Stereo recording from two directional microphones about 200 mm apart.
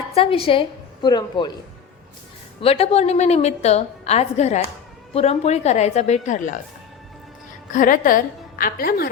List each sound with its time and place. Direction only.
0.1 s a man's voice: 30° left (ahead or behind)
2.6 s a woman's voice: 30° left (ahead or behind)
7.7 s a woman's voice: 40° left (ahead or behind)